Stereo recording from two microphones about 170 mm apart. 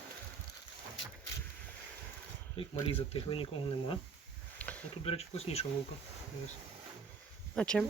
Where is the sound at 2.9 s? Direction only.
35° left (ahead or behind).